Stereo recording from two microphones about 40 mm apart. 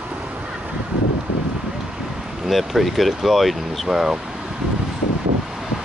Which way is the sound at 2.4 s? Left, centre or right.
Centre.